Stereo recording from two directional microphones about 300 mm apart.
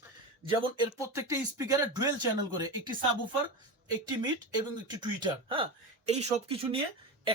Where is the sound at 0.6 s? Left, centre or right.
Centre.